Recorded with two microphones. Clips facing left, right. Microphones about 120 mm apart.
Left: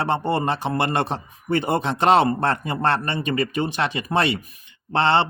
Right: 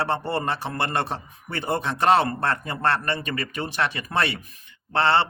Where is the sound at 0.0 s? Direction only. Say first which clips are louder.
Left 3 dB; 20° left (ahead or behind).